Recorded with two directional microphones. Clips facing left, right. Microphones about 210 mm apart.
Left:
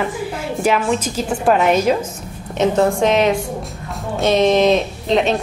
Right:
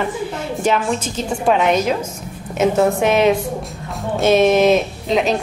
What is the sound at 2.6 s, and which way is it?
Speech, 5° right (ahead or behind).